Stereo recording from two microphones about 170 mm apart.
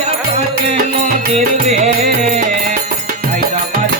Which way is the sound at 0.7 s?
40° right (ahead or behind).